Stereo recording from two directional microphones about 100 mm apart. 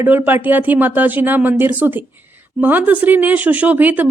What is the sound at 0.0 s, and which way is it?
A woman's voice, 20° right (ahead or behind).